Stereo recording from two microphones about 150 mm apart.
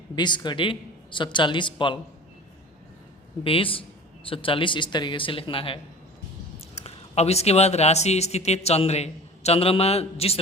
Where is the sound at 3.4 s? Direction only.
35° left (ahead or behind).